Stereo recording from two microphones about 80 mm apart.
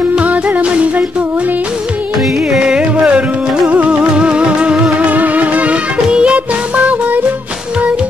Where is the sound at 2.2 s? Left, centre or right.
Centre.